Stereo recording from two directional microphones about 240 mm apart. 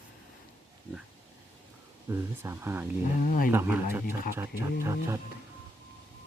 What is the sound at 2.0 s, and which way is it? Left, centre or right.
Speech, centre.